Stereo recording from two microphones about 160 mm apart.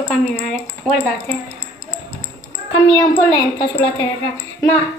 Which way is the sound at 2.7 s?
20° left (ahead or behind).